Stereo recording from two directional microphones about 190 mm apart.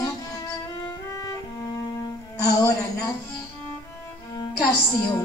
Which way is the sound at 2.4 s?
20° left (ahead or behind).